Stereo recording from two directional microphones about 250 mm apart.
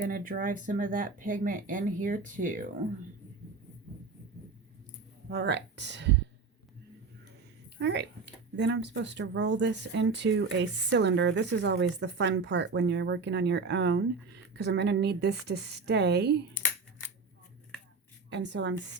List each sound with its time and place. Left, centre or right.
0.1 s speech: right
5.3 s speech: right
7.8 s speech: right
18.3 s speech: right